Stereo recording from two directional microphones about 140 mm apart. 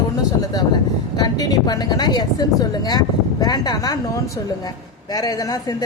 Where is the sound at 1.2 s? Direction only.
25° left (ahead or behind).